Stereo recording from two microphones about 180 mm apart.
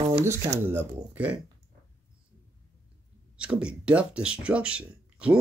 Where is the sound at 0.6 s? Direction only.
10° right (ahead or behind).